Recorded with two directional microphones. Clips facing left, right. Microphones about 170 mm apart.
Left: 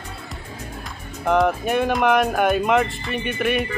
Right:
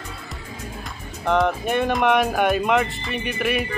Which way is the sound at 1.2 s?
5° left (ahead or behind).